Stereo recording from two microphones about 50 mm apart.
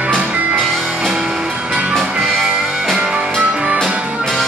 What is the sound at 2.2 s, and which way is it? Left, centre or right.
Music, centre.